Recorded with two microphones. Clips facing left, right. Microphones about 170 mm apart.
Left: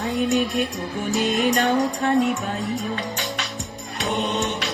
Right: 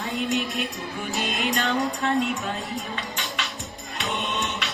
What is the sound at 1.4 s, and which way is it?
Music, 45° left (ahead or behind).